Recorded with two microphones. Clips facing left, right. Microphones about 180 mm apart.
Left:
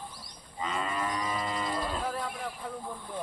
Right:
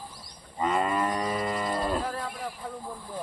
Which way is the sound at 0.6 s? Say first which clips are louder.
Right 7 dB; 50° right (ahead or behind).